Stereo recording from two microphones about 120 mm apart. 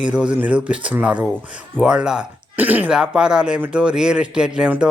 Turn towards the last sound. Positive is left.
turn(degrees=-5)  # may be behind; listen again after turning